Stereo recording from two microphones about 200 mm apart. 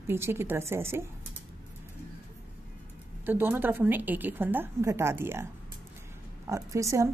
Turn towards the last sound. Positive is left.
turn(degrees=-15)  # may be behind; listen again after turning